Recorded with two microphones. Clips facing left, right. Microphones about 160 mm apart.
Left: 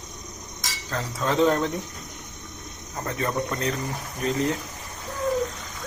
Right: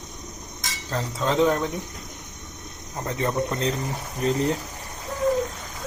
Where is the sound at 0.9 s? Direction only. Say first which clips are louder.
Right 1 dB; 20° right (ahead or behind).